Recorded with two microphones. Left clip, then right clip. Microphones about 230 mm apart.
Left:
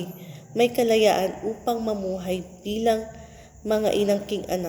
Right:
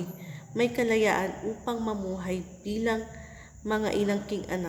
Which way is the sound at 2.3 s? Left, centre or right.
Right.